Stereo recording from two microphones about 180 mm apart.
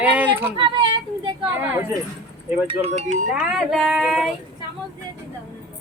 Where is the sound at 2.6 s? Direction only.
30° right (ahead or behind).